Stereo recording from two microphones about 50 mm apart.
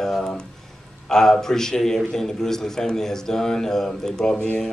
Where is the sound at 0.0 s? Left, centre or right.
Centre.